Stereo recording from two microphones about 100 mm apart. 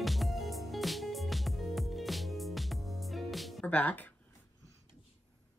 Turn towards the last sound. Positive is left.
turn(degrees=15)  # may be behind; listen again after turning